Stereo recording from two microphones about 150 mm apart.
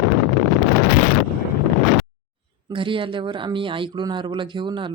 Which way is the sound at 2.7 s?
35° right (ahead or behind).